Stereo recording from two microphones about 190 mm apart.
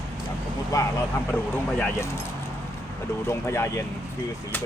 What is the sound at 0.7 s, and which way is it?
Speech, 15° left (ahead or behind).